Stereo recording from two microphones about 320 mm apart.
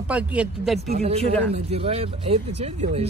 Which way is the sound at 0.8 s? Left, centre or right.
Right.